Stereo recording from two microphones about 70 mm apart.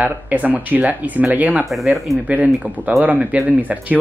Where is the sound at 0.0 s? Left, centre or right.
Right.